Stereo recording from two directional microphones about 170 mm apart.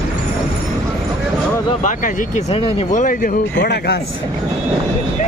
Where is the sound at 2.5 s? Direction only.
35° left (ahead or behind).